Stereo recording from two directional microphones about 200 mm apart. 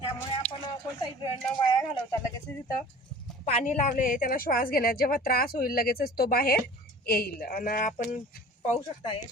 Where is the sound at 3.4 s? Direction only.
35° left (ahead or behind).